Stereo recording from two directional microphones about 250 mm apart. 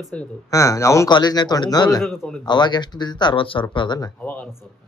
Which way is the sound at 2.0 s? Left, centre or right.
Centre.